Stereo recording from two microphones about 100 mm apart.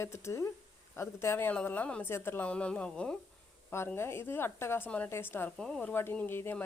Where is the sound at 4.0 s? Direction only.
25° left (ahead or behind).